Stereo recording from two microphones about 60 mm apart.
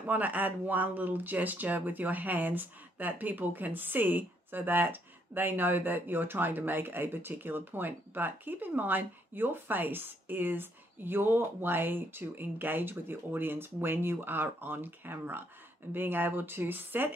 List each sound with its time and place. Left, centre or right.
0.0 s speech: right